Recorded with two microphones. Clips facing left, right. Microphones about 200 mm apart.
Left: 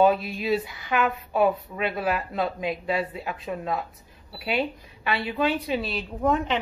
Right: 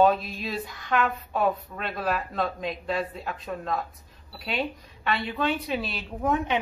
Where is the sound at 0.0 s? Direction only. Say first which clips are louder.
Left 1 dB; 5° left (ahead or behind).